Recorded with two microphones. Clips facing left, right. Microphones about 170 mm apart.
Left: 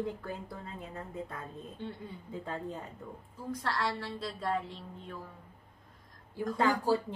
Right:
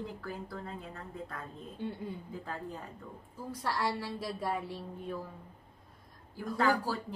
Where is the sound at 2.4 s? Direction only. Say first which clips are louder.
Left 5 dB; 25° left (ahead or behind).